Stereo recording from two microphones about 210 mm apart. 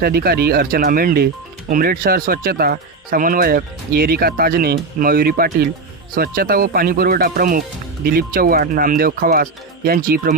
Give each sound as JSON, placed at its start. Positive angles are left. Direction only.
{"t": 0.0, "sound": "speech", "side_deg": -45}